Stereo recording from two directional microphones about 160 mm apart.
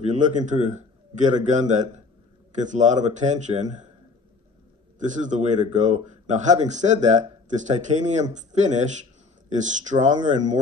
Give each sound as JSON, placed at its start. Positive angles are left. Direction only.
{"t": 0.0, "sound": "a man's voice", "side_deg": -50}
{"t": 4.9, "sound": "speech", "side_deg": -50}